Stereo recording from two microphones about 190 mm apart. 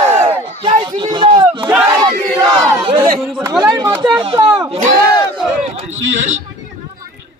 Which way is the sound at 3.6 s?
20° right (ahead or behind).